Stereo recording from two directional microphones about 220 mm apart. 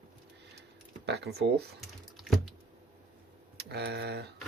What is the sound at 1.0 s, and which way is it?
Speech, 50° right (ahead or behind).